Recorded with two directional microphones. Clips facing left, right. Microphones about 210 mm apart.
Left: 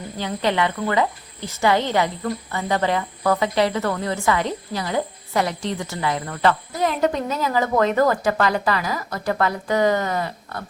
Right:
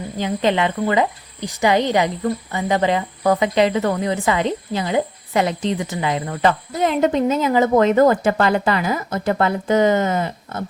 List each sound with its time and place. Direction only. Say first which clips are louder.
0.2 s speech: right 3 dB; 20° right (ahead or behind)